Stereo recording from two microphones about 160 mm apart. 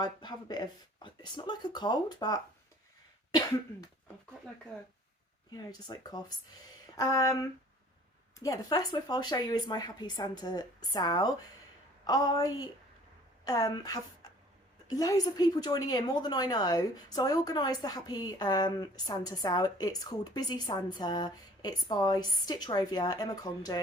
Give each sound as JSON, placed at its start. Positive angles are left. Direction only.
{"t": 0.0, "sound": "a woman's voice", "side_deg": 25}
{"t": 5.5, "sound": "a woman's voice", "side_deg": 25}